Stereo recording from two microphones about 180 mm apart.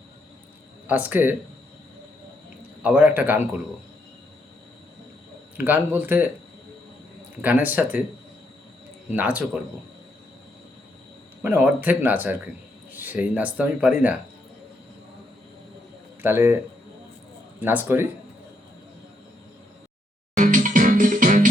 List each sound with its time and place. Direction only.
0.9 s speech: 10° right (ahead or behind)
2.8 s speech: 10° right (ahead or behind)
5.5 s speech: 10° right (ahead or behind)
7.4 s speech: 10° right (ahead or behind)
9.1 s speech: 10° right (ahead or behind)
11.4 s speech: 10° right (ahead or behind)
16.2 s speech: 10° right (ahead or behind)
17.6 s speech: 10° right (ahead or behind)
20.4 s music: 45° right (ahead or behind)